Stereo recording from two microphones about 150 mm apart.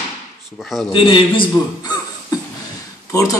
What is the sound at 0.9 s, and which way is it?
A man's voice, 35° left (ahead or behind).